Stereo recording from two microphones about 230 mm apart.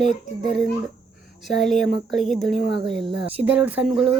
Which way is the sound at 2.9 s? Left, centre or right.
Right.